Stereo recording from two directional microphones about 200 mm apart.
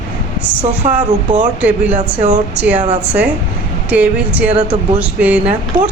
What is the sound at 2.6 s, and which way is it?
Speech, 10° right (ahead or behind).